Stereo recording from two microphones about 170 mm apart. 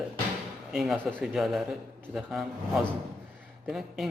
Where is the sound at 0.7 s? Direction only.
Centre (ahead or behind).